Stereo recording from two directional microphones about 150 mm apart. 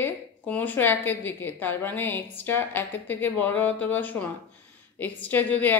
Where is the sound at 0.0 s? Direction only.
10° left (ahead or behind).